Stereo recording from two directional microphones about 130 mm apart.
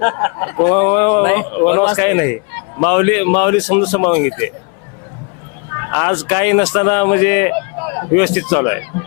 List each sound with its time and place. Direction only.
0.0 s speech: 20° left (ahead or behind)
5.7 s speech: 25° left (ahead or behind)